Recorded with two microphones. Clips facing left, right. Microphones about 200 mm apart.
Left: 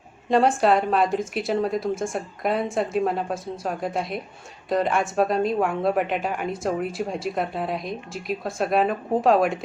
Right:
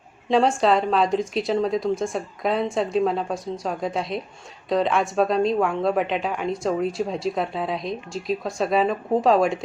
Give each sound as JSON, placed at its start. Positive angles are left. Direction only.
{"t": 0.3, "sound": "speech", "side_deg": 0}